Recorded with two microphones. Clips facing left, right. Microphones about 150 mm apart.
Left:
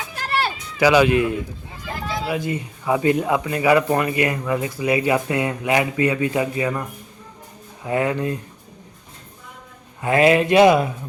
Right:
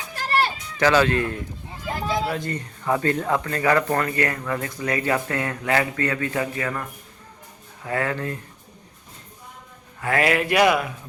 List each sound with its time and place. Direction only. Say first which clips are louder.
0.8 s speech: left 4 dB; 10° left (ahead or behind)
7.9 s speech: left 5 dB; 20° left (ahead or behind)
10.0 s speech: left 6 dB; 20° left (ahead or behind)